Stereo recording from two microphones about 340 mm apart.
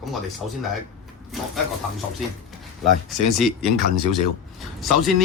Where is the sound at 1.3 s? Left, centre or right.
Centre.